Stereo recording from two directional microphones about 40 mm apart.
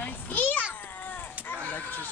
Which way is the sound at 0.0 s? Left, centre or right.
Left.